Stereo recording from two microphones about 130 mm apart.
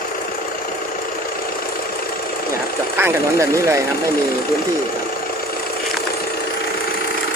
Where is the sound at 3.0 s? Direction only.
20° right (ahead or behind).